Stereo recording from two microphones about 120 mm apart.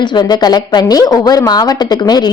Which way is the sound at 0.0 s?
40° left (ahead or behind).